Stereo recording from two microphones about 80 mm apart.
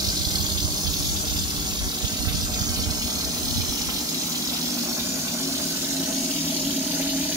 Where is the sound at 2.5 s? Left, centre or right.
Right.